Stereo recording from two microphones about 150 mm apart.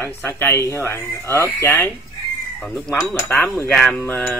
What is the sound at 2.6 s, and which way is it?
Cutlery, centre (ahead or behind).